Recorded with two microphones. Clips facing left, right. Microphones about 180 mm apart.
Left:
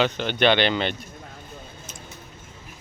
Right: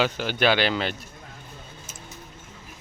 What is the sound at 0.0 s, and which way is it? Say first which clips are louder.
Speech: left 2 dB; 5° right (ahead or behind).